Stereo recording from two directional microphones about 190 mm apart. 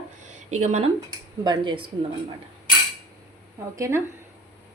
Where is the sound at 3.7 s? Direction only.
15° right (ahead or behind).